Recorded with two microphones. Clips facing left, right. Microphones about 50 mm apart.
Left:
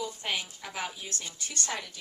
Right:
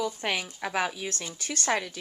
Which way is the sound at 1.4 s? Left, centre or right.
Right.